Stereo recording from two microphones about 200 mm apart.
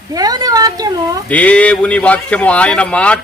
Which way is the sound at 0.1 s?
20° right (ahead or behind).